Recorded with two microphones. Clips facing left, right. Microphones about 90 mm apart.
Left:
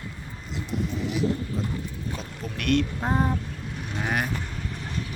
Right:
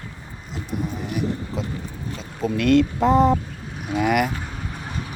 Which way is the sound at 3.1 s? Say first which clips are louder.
Right 8 dB; 90° right.